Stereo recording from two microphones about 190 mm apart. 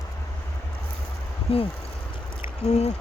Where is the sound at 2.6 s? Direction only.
35° left (ahead or behind).